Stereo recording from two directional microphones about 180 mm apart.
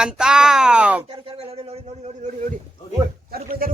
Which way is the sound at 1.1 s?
30° right (ahead or behind).